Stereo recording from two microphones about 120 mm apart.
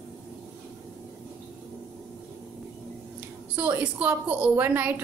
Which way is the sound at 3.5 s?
15° right (ahead or behind).